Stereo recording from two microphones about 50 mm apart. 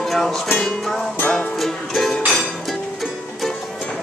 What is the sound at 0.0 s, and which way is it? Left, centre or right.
Music, centre.